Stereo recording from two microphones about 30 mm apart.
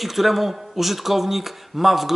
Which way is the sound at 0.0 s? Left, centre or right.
Centre.